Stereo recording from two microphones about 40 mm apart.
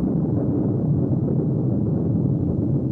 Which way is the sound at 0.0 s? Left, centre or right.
Left.